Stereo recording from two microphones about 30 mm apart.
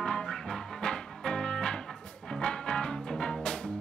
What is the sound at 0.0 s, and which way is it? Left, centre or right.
Music, centre.